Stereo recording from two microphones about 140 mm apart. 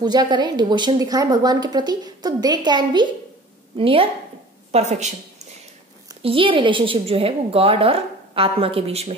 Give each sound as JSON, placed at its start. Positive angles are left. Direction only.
{"t": 0.0, "sound": "a woman's voice", "side_deg": -30}
{"t": 4.7, "sound": "a woman's voice", "side_deg": -55}
{"t": 6.2, "sound": "a woman's voice", "side_deg": -40}